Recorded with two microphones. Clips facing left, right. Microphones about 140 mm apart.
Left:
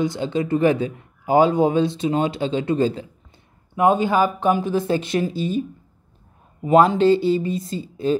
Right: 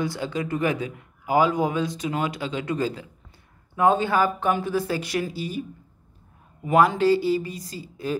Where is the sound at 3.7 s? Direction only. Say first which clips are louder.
Left 3 dB; 15° left (ahead or behind).